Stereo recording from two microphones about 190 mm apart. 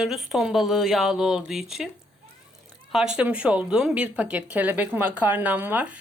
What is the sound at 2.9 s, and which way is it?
Speech, 5° right (ahead or behind).